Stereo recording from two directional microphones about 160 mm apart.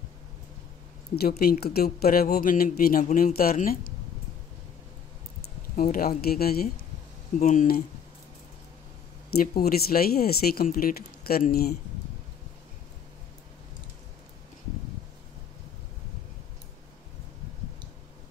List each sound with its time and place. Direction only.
1.1 s speech: 75° left (ahead or behind)
3.0 s speech: 50° left (ahead or behind)
3.3 s speech: 65° left (ahead or behind)
5.4 s speech: 65° left (ahead or behind)
7.3 s speech: 55° left (ahead or behind)
9.6 s speech: 70° left (ahead or behind)